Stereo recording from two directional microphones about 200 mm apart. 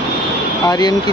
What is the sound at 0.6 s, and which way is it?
Speech, 20° left (ahead or behind).